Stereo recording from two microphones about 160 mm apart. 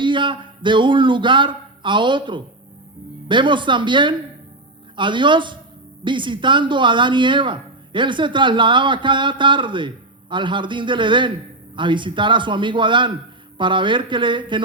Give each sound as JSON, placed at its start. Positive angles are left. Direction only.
{"t": 0.0, "sound": "a man's voice", "side_deg": -30}